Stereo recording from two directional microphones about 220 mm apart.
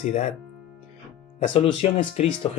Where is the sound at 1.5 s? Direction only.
25° left (ahead or behind).